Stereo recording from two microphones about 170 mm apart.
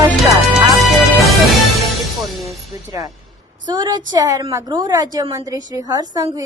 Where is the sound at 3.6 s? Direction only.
25° right (ahead or behind).